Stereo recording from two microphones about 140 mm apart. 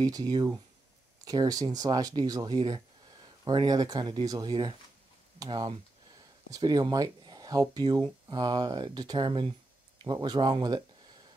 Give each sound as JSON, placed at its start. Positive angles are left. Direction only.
{"t": 0.0, "sound": "speech", "side_deg": -25}